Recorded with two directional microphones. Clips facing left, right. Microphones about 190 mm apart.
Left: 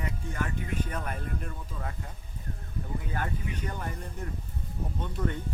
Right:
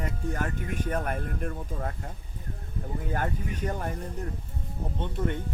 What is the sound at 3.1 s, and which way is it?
Speech, 45° right (ahead or behind).